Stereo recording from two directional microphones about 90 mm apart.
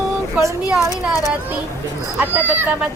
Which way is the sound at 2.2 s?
20° right (ahead or behind).